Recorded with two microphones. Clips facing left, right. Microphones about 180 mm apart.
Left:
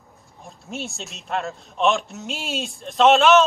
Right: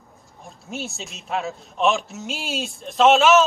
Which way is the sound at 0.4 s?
Centre (ahead or behind).